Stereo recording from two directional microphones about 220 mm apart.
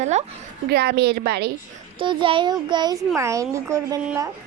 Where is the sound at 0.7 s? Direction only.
45° right (ahead or behind).